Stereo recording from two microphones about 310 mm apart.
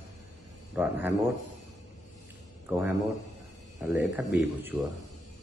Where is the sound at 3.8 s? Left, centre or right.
Centre.